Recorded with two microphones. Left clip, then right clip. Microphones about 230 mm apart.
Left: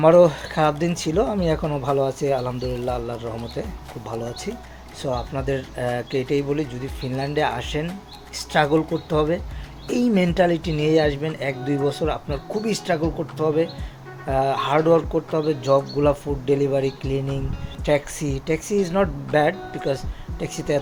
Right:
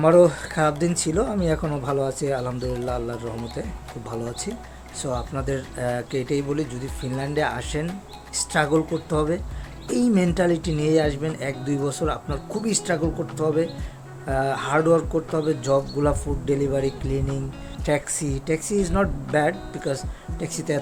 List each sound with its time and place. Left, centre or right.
0.0 s speech: centre